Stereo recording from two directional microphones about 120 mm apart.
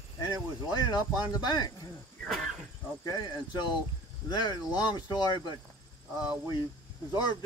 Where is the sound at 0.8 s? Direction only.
35° left (ahead or behind).